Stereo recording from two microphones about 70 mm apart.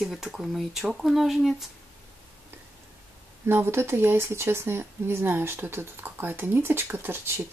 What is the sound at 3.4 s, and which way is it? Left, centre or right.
Speech, right.